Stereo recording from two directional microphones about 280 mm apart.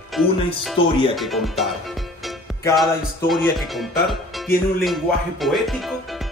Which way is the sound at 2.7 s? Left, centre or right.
Centre.